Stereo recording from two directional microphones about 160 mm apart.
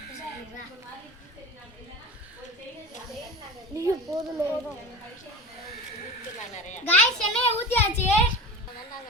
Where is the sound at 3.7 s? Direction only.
20° right (ahead or behind).